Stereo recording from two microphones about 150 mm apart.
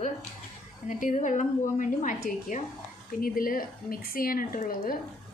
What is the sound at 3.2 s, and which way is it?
A woman's voice, 70° left (ahead or behind).